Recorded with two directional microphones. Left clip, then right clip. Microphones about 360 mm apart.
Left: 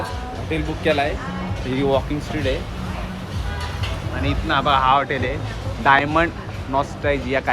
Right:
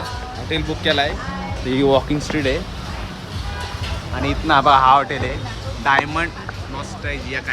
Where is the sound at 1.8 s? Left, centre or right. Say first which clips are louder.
Right 4 dB; right.